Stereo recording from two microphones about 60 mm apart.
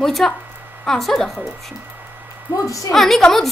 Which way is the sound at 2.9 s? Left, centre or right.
Centre.